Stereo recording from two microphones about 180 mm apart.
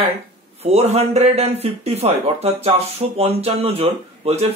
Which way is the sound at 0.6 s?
35° right (ahead or behind).